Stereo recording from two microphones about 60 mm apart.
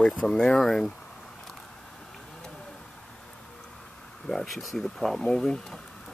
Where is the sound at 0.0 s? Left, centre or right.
Centre.